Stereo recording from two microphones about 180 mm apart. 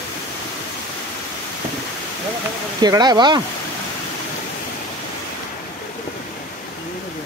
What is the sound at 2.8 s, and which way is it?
Speech, 20° right (ahead or behind).